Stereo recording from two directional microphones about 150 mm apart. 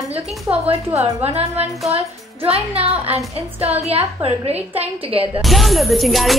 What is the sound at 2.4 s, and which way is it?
A woman's voice, 40° right (ahead or behind).